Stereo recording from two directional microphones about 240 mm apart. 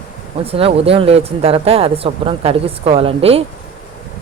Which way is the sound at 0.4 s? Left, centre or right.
Right.